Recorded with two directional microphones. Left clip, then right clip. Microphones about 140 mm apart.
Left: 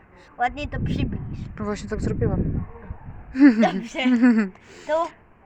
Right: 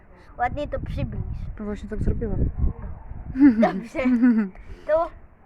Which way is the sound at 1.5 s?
10° right (ahead or behind).